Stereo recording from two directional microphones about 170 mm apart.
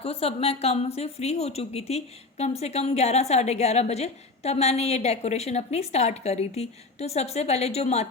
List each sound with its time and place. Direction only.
0.0 s a woman's voice: 35° left (ahead or behind)